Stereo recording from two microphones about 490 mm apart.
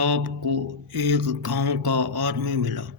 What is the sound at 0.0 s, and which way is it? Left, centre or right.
Mantra, right.